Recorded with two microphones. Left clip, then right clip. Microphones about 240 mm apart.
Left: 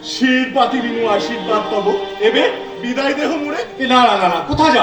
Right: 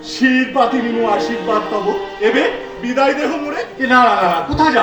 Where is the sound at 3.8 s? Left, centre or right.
Left.